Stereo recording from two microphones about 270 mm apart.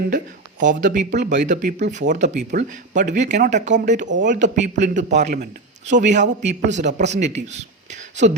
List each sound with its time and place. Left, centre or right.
0.6 s speech: right